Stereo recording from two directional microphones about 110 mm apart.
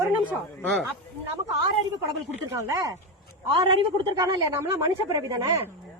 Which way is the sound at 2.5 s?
30° right (ahead or behind).